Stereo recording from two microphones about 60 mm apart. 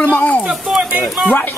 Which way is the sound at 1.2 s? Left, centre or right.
Left.